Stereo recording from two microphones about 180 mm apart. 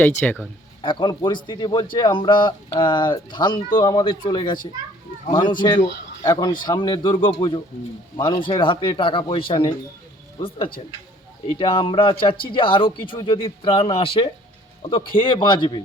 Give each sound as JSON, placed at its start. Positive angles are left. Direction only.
{"t": 0.2, "sound": "speech", "side_deg": 10}
{"t": 0.8, "sound": "a man's voice", "side_deg": 25}
{"t": 11.5, "sound": "a man's voice", "side_deg": 30}